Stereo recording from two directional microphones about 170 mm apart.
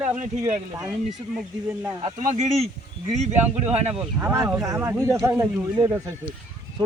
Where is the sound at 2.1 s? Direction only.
45° right (ahead or behind).